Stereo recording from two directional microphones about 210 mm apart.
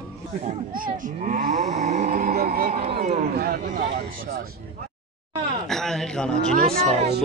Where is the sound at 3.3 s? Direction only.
45° right (ahead or behind).